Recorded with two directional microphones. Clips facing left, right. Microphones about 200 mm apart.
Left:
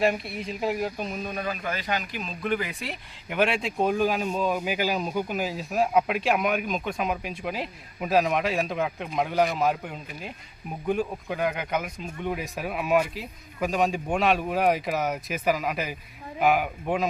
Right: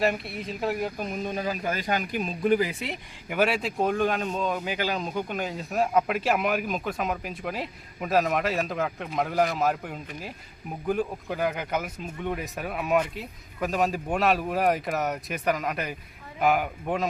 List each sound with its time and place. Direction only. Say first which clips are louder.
0.0 s speech: left 1 dB; centre (ahead or behind)
1.1 s a man's voice: right 2 dB; 20° right (ahead or behind)
1.5 s speech: right 1 dB; 40° right (ahead or behind)
2.4 s speech: right 5 dB; 35° right (ahead or behind)
3.2 s speech: even; 5° right (ahead or behind)